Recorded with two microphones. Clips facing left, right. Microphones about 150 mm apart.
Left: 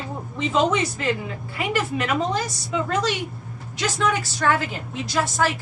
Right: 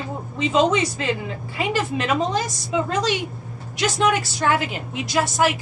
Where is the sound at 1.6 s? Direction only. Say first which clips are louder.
Right 1 dB; 25° right (ahead or behind).